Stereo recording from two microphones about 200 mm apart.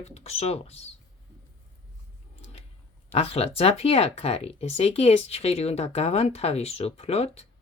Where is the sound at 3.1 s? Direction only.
30° left (ahead or behind).